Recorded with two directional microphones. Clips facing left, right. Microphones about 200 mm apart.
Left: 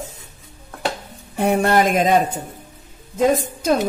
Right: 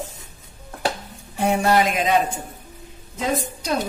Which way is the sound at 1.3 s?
55° left (ahead or behind).